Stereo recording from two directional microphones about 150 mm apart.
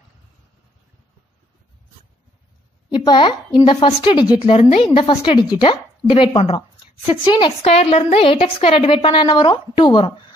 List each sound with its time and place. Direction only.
2.9 s a woman's voice: 30° left (ahead or behind)